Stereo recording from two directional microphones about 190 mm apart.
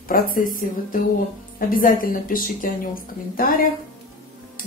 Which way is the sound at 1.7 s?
45° left (ahead or behind).